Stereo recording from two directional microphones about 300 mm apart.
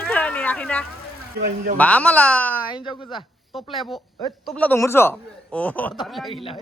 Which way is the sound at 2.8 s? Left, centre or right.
Centre.